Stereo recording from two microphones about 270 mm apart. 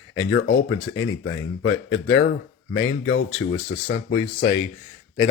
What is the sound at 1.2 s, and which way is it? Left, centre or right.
Speech, left.